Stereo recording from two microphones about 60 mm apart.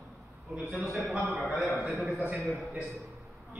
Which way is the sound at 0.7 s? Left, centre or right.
Centre.